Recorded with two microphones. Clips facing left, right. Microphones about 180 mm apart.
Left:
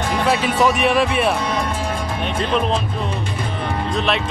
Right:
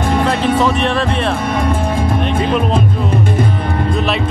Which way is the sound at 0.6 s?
10° left (ahead or behind).